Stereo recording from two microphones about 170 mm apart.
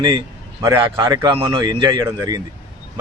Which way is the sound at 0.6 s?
20° right (ahead or behind).